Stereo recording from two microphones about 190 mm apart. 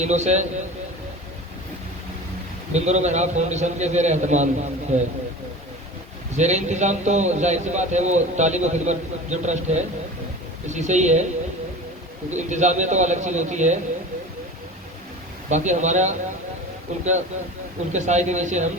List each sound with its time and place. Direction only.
0.0 s a man's voice: 35° right (ahead or behind)
2.7 s a man's voice: 35° right (ahead or behind)
6.3 s a man's voice: 35° right (ahead or behind)
12.3 s a man's voice: 40° right (ahead or behind)
15.4 s a man's voice: 40° right (ahead or behind)